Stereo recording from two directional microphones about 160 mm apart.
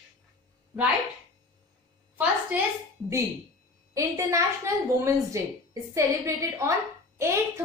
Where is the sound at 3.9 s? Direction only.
20° right (ahead or behind).